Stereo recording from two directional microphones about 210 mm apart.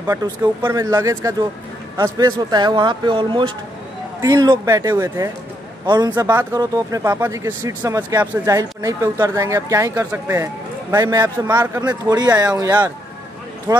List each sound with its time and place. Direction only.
0.0 s speech: 15° right (ahead or behind)